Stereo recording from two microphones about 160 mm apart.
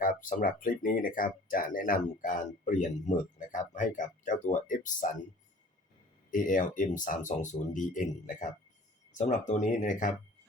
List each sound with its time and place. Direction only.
0.0 s speech: 60° left (ahead or behind)
6.3 s speech: 55° left (ahead or behind)